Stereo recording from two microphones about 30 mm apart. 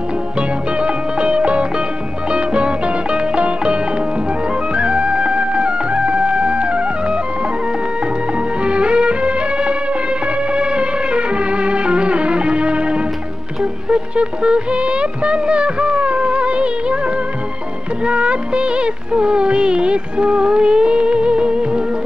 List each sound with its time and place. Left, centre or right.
0.4 s music: right
8.6 s music: right
13.8 s music of bollywood: right
18.0 s music of bollywood: right